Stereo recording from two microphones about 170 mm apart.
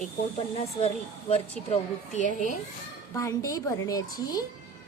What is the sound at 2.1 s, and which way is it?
Speech, 50° left (ahead or behind).